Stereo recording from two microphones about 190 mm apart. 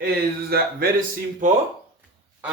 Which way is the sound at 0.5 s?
55° right (ahead or behind).